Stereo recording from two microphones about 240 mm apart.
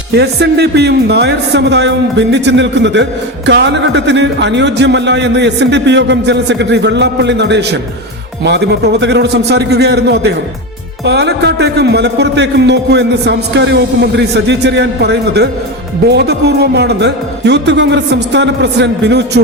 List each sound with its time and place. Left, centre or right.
0.1 s a man's voice: right